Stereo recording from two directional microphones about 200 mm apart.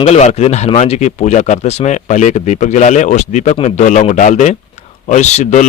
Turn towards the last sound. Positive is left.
turn(degrees=35)  # may be behind; listen again after turning